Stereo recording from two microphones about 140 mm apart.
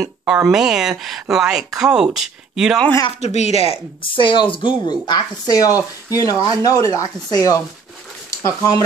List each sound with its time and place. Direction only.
0.2 s speech: 10° right (ahead or behind)
3.2 s speech: 50° left (ahead or behind)
4.0 s speech: 35° left (ahead or behind)